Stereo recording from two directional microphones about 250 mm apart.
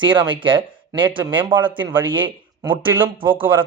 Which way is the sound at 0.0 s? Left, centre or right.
Centre.